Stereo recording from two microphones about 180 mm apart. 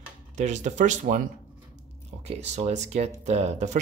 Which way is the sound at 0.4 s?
40° right (ahead or behind).